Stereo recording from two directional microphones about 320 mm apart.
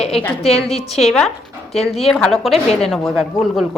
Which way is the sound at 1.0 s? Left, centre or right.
Centre.